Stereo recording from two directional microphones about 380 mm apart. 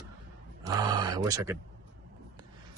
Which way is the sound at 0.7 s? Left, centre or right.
Centre.